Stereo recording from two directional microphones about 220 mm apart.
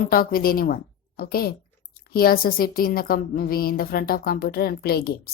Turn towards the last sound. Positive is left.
turn(degrees=45)  # may be behind; listen again after turning